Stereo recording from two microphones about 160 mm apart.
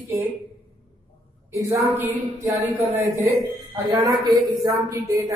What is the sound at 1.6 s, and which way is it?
A man's voice, 20° right (ahead or behind).